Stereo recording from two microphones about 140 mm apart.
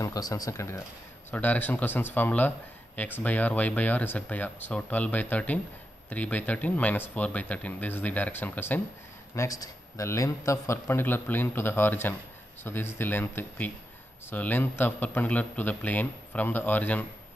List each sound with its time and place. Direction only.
0.0 s a man's voice: 25° left (ahead or behind)